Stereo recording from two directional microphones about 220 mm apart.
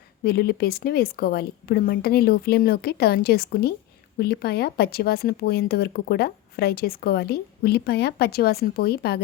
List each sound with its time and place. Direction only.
0.3 s speech: 45° left (ahead or behind)